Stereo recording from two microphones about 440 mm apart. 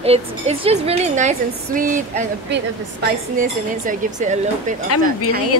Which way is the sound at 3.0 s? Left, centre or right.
Centre.